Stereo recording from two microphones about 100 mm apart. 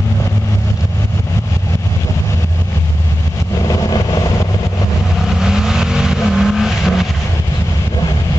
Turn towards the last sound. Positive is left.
turn(degrees=-5)  # may be behind; listen again after turning